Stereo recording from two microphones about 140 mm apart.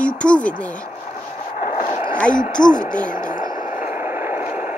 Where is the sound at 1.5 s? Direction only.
70° left (ahead or behind).